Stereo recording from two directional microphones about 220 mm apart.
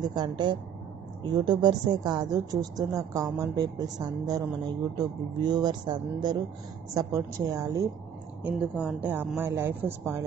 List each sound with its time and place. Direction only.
0.0 s a woman's voice: 20° right (ahead or behind)